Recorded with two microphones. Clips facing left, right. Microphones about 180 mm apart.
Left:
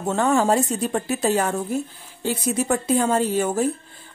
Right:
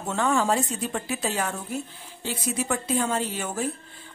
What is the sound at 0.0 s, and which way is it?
Speech, 40° left (ahead or behind).